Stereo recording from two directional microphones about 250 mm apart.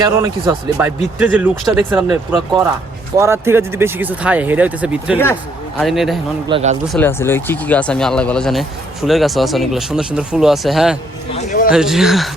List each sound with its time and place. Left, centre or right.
0.0 s speech: centre
1.2 s speech: centre
5.2 s speech: centre
6.5 s speech: right
6.8 s speech: centre
11.3 s a sound: left
11.7 s speech: centre